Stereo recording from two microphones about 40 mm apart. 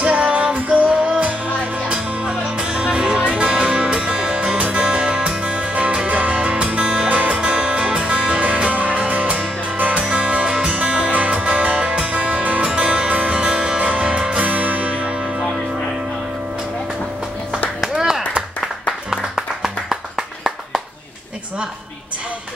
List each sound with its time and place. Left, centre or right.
0.0 s music: right
4.6 s music: right
4.8 s music: right
10.0 s music: right
14.4 s music: right
17.7 s clapping: centre